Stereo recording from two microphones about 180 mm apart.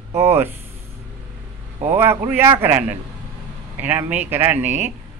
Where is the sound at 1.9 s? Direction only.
10° right (ahead or behind).